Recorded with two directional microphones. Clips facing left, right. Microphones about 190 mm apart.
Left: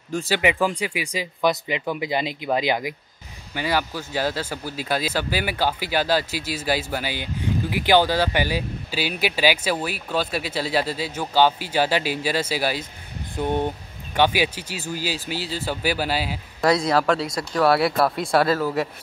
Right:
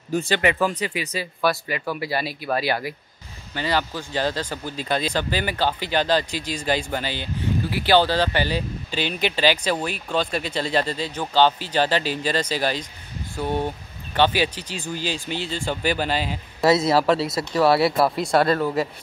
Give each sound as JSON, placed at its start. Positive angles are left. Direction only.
{"t": 0.1, "sound": "speech", "side_deg": 0}
{"t": 0.4, "sound": "speech", "side_deg": 15}
{"t": 13.4, "sound": "speech", "side_deg": 20}
{"t": 16.6, "sound": "speech", "side_deg": -5}